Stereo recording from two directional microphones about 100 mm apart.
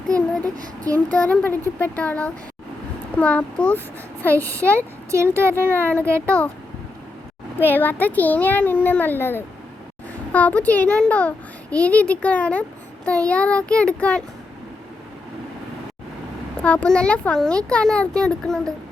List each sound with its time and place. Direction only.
0.1 s child singing: 35° right (ahead or behind)
0.9 s a child's voice: 15° left (ahead or behind)
5.1 s speech: 25° right (ahead or behind)
5.6 s a child's voice: 15° left (ahead or behind)
7.6 s a child's voice: 20° left (ahead or behind)
16.6 s a child's voice: 10° left (ahead or behind)